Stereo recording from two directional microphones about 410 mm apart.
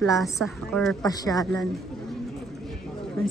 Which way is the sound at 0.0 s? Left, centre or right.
Centre.